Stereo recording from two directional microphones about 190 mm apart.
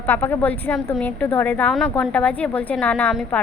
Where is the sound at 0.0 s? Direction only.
10° left (ahead or behind).